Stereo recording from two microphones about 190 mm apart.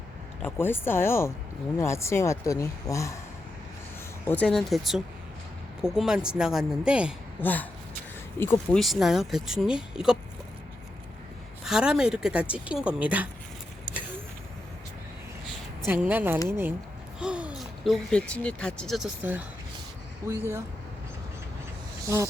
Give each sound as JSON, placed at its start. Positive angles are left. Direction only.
{"t": 0.4, "sound": "speech", "side_deg": 10}
{"t": 4.3, "sound": "speech", "side_deg": 5}
{"t": 7.4, "sound": "speech", "side_deg": 10}
{"t": 8.7, "sound": "speech", "side_deg": 0}
{"t": 11.6, "sound": "speech", "side_deg": -5}
{"t": 15.9, "sound": "speech", "side_deg": -10}
{"t": 22.0, "sound": "speech", "side_deg": -15}